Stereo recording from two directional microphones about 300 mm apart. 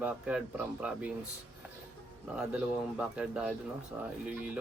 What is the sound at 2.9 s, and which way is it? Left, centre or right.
Speech, centre.